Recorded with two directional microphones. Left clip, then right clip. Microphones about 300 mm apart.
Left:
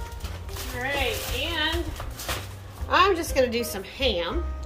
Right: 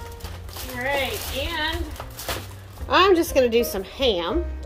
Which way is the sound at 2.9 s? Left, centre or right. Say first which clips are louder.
Right 4 dB; right.